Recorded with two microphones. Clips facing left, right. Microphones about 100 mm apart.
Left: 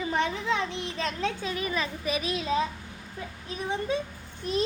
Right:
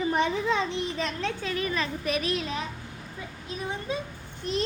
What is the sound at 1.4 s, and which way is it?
Speech, 20° left (ahead or behind).